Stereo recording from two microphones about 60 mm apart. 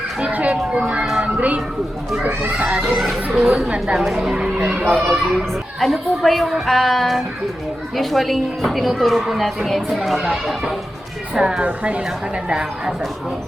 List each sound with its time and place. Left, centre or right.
0.2 s a child's voice: right
1.0 s music: centre
1.4 s a child's voice: right
2.6 s speech: centre
4.9 s speech: centre
11.3 s speech: centre
11.6 s a child's voice: right